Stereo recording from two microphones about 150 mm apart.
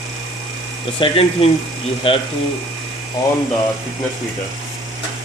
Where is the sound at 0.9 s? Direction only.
35° left (ahead or behind).